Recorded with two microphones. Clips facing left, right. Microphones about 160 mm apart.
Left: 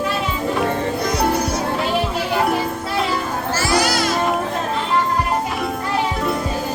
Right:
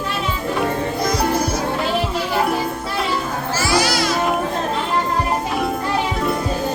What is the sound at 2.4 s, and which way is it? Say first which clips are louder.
Music: left 1 dB; centre (ahead or behind).